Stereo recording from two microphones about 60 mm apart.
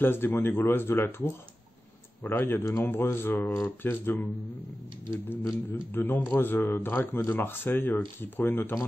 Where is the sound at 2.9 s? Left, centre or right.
Left.